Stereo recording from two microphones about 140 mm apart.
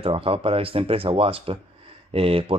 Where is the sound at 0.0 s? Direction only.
40° right (ahead or behind).